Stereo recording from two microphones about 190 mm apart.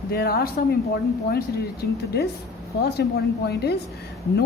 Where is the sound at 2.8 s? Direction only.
60° left (ahead or behind).